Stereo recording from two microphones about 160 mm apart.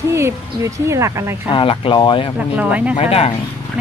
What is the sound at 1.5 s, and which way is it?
Speech, 35° left (ahead or behind).